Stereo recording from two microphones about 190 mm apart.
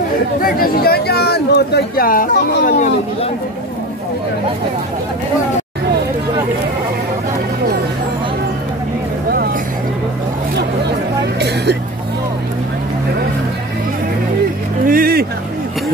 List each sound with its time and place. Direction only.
0.4 s speech: 50° left (ahead or behind)
11.3 s vehicle: 60° right (ahead or behind)
14.9 s a sound: 50° right (ahead or behind)